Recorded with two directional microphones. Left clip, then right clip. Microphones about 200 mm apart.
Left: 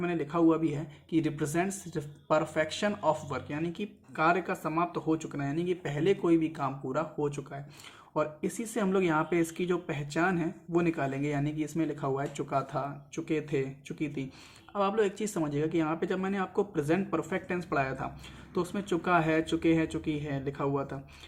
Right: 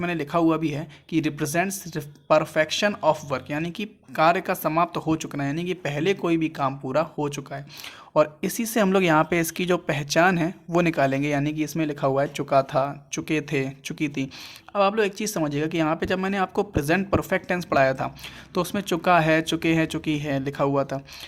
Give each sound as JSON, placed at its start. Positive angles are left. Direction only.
{"t": 0.0, "sound": "speech", "side_deg": -45}